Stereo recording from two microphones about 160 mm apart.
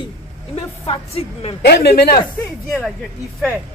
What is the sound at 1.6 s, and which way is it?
Speech, 90° left.